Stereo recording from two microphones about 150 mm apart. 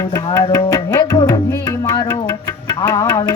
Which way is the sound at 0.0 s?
20° left (ahead or behind).